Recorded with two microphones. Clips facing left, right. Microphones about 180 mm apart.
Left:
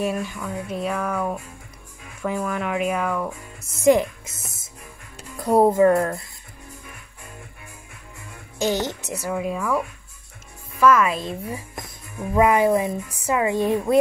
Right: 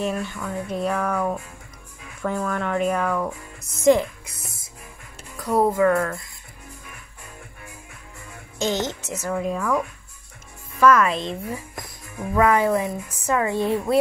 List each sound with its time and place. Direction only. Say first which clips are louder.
0.0 s speech: left 1 dB; 10° left (ahead or behind)
5.4 s speech: left 3 dB; 25° left (ahead or behind)
5.9 s speech: left 2 dB; 35° left (ahead or behind)
8.5 s speech: left 1 dB; 10° left (ahead or behind)